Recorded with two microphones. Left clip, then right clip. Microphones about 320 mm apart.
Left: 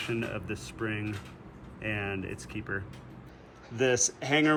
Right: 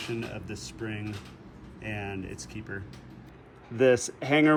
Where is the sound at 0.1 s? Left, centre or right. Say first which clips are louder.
Left 2 dB; centre.